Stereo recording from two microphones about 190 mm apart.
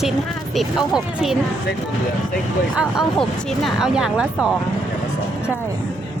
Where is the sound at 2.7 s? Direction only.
Centre (ahead or behind).